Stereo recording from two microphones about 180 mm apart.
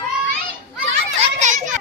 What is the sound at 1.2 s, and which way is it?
Children playing, 40° right (ahead or behind).